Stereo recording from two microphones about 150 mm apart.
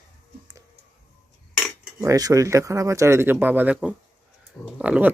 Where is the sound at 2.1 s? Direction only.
25° right (ahead or behind).